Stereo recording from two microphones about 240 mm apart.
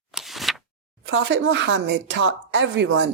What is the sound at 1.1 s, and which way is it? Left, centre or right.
Speech, right.